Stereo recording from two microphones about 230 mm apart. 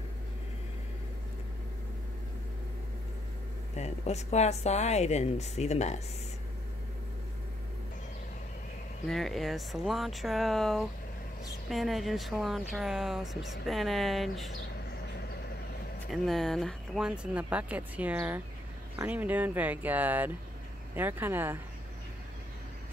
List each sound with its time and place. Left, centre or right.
3.7 s a woman's voice: left
9.0 s speech: centre
16.1 s speech: centre